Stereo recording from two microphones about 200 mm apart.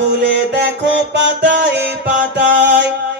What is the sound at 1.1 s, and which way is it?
Music, 60° right (ahead or behind).